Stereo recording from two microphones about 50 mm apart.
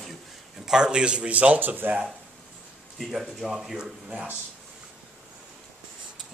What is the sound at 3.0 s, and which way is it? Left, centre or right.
Speech, centre.